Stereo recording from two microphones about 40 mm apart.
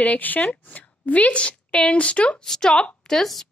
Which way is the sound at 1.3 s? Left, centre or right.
Left.